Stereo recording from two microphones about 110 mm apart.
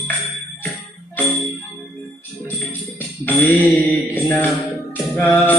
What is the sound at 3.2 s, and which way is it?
Music, 15° left (ahead or behind).